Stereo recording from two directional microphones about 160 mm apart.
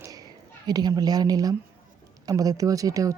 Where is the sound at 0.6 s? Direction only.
25° right (ahead or behind).